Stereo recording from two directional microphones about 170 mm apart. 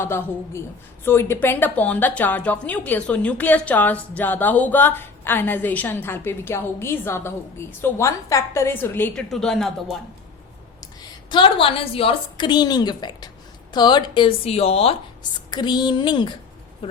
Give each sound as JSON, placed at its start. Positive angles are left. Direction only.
{"t": 0.0, "sound": "a woman's voice", "side_deg": 15}
{"t": 11.3, "sound": "a woman's voice", "side_deg": 30}